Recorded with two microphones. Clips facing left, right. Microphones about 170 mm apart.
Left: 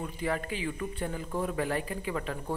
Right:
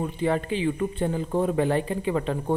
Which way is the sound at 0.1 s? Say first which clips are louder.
Right 7 dB; 25° right (ahead or behind).